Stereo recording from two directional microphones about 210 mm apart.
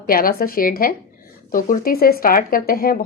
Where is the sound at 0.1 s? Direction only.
45° left (ahead or behind).